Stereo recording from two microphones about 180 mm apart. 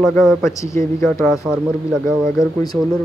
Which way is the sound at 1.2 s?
Centre (ahead or behind).